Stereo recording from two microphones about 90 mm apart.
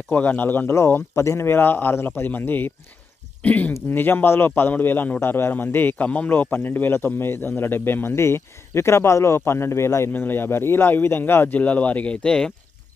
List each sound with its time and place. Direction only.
0.1 s a man's voice: 20° left (ahead or behind)